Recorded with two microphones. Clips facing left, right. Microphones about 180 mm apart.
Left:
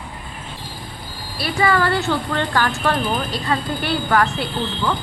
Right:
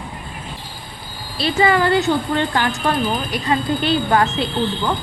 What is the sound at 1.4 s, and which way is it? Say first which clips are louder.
Speech: right 2 dB; 20° right (ahead or behind).